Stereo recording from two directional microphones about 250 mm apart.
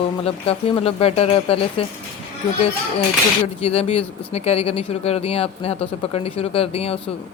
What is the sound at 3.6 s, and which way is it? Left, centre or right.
Speech, left.